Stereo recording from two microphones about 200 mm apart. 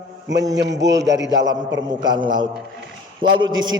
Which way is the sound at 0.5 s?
60° right (ahead or behind).